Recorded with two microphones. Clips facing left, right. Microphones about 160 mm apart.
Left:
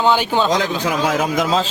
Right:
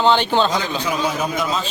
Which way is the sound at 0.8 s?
90° left.